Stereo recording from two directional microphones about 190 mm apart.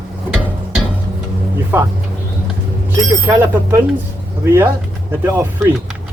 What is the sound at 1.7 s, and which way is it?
Speech, 10° right (ahead or behind).